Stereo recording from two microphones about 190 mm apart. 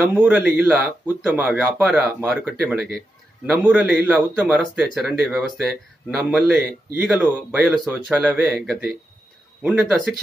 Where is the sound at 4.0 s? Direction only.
10° right (ahead or behind).